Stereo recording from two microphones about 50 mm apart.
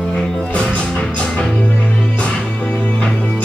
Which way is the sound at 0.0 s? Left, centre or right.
Centre.